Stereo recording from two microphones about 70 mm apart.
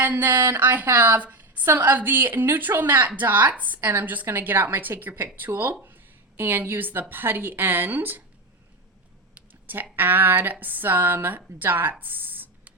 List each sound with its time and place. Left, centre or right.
0.0 s a woman's voice: right
9.3 s a sound: right
9.9 s a woman's voice: right